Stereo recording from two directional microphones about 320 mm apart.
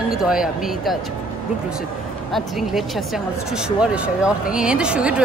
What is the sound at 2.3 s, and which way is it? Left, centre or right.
Speech, centre.